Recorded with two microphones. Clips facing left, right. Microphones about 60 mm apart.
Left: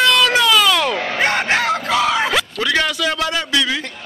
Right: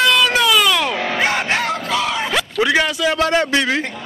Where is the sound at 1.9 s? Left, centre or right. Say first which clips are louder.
Left 4 dB; centre.